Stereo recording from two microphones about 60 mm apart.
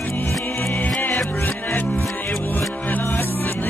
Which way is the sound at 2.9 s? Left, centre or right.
Left.